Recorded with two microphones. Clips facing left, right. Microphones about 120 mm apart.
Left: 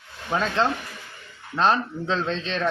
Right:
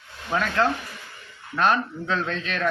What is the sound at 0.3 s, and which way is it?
Speech, 20° left (ahead or behind).